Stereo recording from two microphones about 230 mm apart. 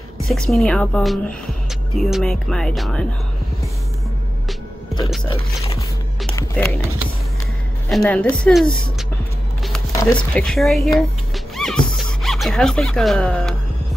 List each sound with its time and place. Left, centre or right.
0.3 s speech: centre
5.3 s speech: centre
6.3 s music: centre
8.0 s speech: centre
10.0 s speech: centre
11.3 s a sound: centre